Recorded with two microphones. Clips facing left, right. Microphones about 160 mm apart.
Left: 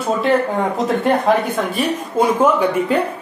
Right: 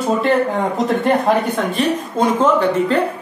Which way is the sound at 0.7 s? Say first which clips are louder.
Even; centre (ahead or behind).